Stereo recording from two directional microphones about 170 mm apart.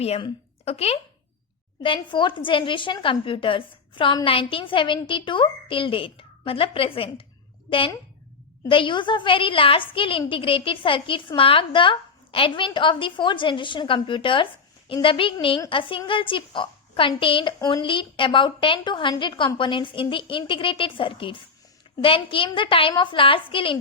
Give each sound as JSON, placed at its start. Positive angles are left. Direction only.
{"t": 0.0, "sound": "a woman's voice", "side_deg": 35}